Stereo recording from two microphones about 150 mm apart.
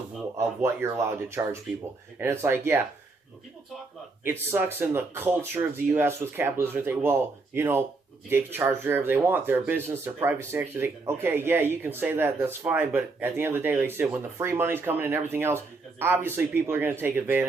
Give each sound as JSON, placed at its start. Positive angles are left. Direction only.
{"t": 0.3, "sound": "speech", "side_deg": -20}
{"t": 4.2, "sound": "speech", "side_deg": -15}